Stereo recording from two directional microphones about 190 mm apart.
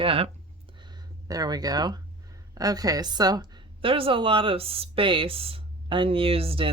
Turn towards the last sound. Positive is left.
turn(degrees=-30)  # may be behind; listen again after turning